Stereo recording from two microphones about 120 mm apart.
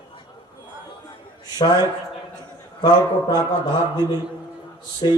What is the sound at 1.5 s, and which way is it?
A man's voice, 35° left (ahead or behind).